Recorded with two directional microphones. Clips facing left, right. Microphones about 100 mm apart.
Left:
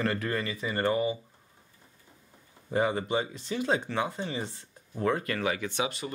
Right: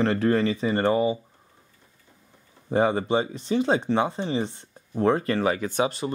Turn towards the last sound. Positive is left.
turn(degrees=-35)  # may be behind; listen again after turning